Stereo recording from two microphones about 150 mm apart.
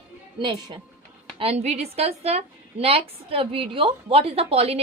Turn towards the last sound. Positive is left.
turn(degrees=-40)  # may be behind; listen again after turning